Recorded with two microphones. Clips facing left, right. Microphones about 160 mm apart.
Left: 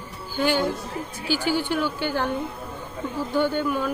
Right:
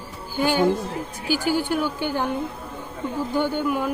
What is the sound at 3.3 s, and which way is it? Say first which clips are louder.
Speech: left 1 dB; 15° right (ahead or behind).